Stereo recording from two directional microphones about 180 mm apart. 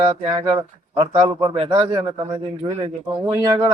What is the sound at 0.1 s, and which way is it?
Speech, 30° right (ahead or behind).